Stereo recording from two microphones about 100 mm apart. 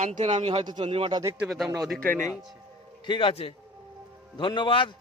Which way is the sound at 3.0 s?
55° left (ahead or behind).